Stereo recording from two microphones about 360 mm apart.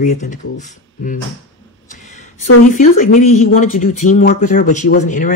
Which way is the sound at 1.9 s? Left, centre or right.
Centre.